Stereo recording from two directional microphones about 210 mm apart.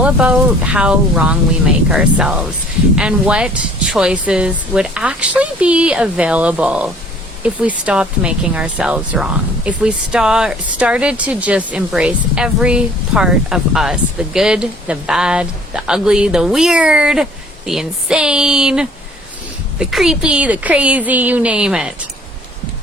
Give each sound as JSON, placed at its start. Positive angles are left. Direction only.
{"t": 0.0, "sound": "speech", "side_deg": -5}